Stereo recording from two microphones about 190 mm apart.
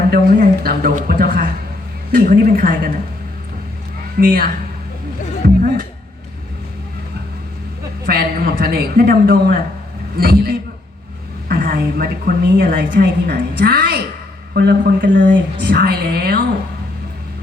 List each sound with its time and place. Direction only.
0.1 s a woman's voice: 50° right (ahead or behind)
4.2 s a woman's voice: 50° right (ahead or behind)
5.4 s music: 55° right (ahead or behind)
8.0 s a woman's voice: 50° right (ahead or behind)